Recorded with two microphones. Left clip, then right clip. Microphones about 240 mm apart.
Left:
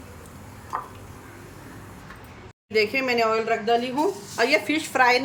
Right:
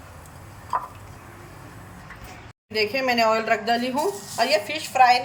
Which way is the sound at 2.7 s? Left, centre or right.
Centre.